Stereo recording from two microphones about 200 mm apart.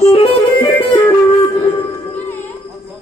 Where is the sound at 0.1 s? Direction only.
25° left (ahead or behind).